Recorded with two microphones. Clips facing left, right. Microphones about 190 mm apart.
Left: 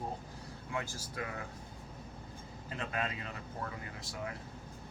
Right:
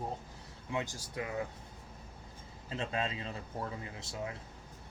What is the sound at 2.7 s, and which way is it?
Speech, 25° right (ahead or behind).